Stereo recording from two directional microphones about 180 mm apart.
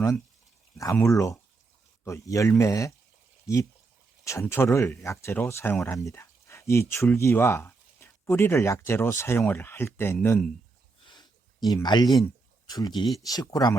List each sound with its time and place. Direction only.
0.9 s speech: 15° left (ahead or behind)
11.0 s a sound: 25° left (ahead or behind)
12.2 s speech: 20° left (ahead or behind)